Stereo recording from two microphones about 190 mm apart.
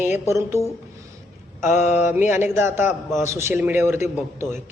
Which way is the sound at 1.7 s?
40° left (ahead or behind).